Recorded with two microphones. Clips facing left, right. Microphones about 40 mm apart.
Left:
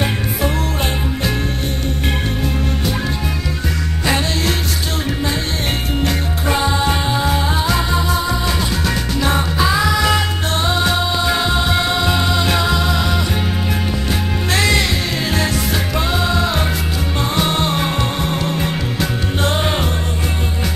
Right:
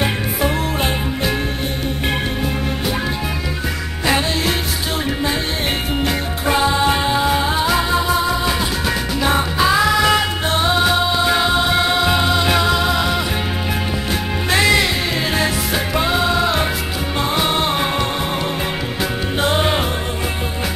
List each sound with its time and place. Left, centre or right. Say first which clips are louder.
5.9 s music: even; centre
14.5 s music: right 2 dB; centre
18.9 s music: even; centre